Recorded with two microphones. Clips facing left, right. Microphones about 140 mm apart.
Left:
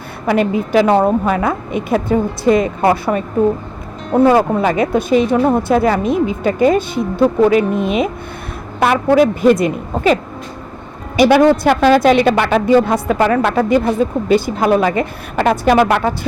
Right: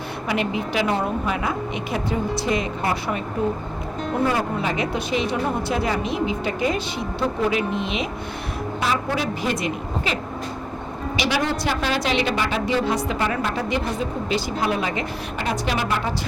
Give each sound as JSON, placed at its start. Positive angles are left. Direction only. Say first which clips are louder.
{"t": 0.3, "sound": "a woman's voice", "louder": "left 10 dB", "side_deg": 45}
{"t": 4.6, "sound": "a woman's voice", "louder": "left 9 dB", "side_deg": 50}
{"t": 11.2, "sound": "a woman's voice", "louder": "left 14 dB", "side_deg": 50}
{"t": 13.2, "sound": "speech", "louder": "left 10 dB", "side_deg": 65}